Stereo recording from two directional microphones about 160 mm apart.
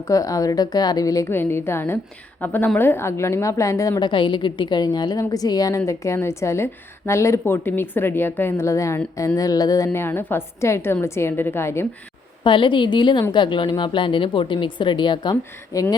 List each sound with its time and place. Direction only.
0.1 s a woman's voice: 20° left (ahead or behind)
12.4 s a woman's voice: 30° left (ahead or behind)